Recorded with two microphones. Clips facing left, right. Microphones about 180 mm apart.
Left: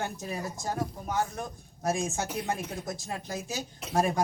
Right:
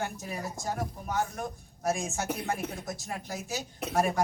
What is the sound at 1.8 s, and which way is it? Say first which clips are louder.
Speech: left 1 dB; 20° left (ahead or behind).